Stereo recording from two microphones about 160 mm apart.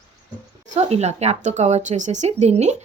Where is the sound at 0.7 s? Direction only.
40° right (ahead or behind).